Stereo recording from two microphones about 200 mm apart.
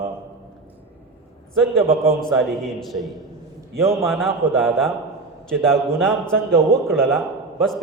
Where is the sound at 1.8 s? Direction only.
30° right (ahead or behind).